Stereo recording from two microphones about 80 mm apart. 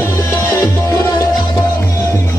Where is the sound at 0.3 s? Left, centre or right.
Left.